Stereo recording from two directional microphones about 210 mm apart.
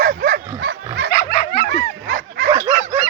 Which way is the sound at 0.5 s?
50° right (ahead or behind).